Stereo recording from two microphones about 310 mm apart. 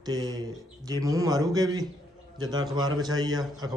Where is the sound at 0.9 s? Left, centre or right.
Centre.